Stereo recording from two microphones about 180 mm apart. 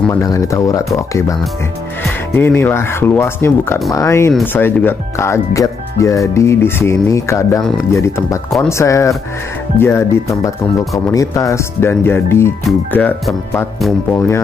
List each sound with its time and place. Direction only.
0.1 s speech: 20° left (ahead or behind)
2.3 s speech: 10° left (ahead or behind)